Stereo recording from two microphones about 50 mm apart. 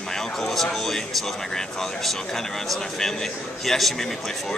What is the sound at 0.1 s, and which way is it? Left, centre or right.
Speech, centre.